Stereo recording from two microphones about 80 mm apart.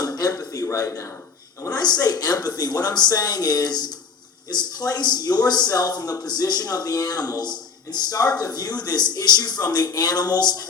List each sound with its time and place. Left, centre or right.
0.0 s a man's voice: left
1.7 s a woman's voice: left